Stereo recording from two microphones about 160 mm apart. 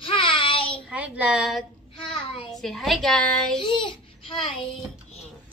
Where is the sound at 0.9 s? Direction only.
5° right (ahead or behind).